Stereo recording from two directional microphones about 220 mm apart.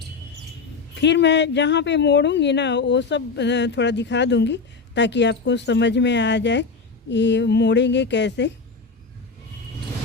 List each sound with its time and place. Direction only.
1.0 s speech: 50° left (ahead or behind)